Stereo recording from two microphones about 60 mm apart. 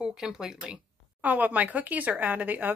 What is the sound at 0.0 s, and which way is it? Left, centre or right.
Speech, centre.